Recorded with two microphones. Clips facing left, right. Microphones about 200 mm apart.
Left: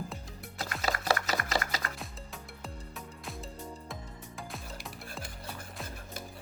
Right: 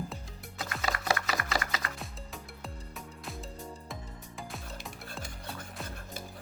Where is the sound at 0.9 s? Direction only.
35° left (ahead or behind).